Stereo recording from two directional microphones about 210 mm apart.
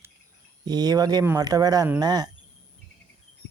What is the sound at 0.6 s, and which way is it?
Speech, 20° right (ahead or behind).